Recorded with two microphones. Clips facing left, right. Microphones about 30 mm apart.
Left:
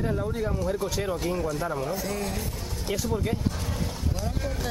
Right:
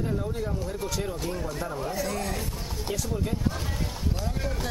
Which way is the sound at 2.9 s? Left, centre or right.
Centre.